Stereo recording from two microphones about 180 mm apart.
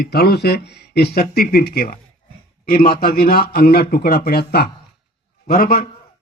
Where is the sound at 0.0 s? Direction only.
60° left (ahead or behind).